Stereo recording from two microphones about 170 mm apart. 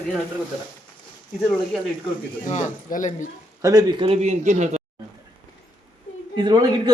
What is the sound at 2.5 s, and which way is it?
Speech, 45° left (ahead or behind).